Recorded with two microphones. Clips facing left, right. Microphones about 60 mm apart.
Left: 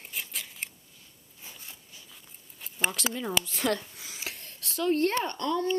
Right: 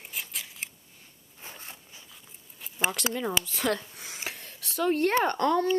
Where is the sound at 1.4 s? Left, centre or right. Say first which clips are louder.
Right 4 dB; right.